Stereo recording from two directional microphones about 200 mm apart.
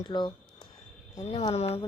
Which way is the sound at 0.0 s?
20° left (ahead or behind).